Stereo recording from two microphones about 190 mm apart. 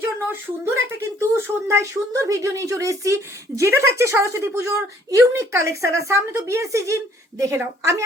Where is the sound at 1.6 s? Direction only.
15° right (ahead or behind).